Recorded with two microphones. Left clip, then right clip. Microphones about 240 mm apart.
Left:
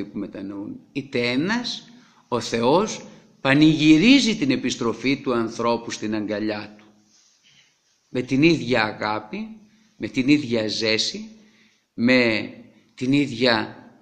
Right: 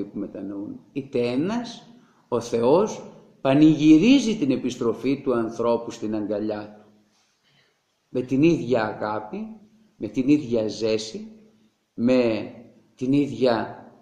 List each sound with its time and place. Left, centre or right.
0.2 s a man's voice: left
8.1 s a man's voice: left